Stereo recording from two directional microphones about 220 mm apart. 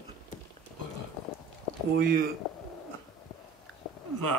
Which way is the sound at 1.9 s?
40° right (ahead or behind).